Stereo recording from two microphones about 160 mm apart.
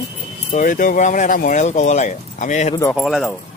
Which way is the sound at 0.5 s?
55° left (ahead or behind).